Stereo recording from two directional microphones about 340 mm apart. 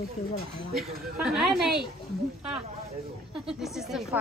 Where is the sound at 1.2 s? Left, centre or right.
Centre.